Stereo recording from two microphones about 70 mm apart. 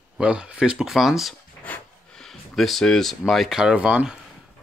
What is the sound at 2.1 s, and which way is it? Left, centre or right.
Speech, centre.